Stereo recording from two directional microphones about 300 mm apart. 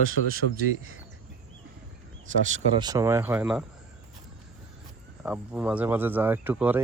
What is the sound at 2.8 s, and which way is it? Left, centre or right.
Speech, centre.